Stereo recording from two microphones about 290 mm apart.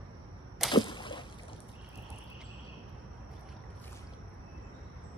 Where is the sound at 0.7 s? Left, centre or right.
Centre.